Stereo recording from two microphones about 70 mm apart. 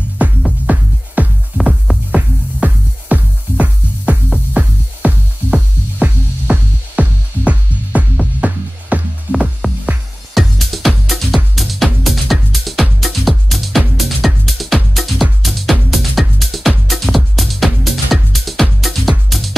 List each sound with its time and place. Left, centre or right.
0.7 s music: right
10.3 s music: centre